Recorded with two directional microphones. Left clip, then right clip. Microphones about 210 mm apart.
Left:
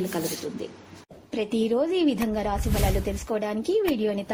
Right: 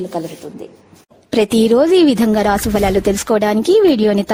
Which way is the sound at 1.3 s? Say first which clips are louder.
Right 13 dB; 55° right (ahead or behind).